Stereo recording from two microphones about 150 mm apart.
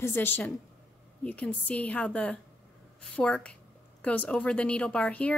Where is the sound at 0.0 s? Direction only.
15° left (ahead or behind).